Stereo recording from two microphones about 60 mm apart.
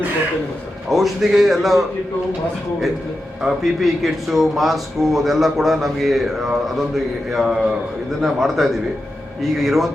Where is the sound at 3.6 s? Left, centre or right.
Centre.